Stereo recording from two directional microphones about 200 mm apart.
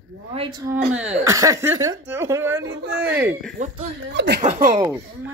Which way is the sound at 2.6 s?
60° right (ahead or behind).